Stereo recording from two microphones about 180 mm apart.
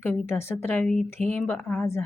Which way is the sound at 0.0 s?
10° left (ahead or behind).